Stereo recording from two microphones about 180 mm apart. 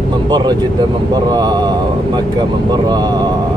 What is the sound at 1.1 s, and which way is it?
Speech, 20° right (ahead or behind).